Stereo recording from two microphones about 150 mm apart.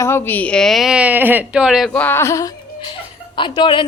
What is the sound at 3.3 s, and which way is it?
Speech, 35° left (ahead or behind).